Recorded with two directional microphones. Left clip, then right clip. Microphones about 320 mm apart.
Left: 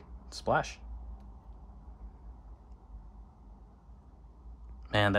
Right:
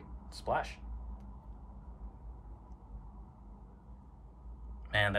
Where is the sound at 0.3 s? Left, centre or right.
Centre.